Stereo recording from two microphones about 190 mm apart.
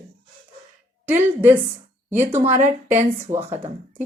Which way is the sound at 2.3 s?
35° right (ahead or behind).